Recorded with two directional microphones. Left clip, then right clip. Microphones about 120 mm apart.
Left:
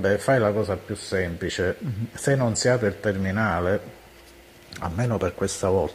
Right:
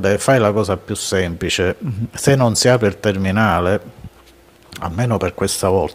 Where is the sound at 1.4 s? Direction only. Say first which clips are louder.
Right 7 dB; 30° right (ahead or behind).